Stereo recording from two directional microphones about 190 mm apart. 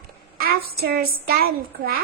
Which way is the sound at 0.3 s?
55° right (ahead or behind).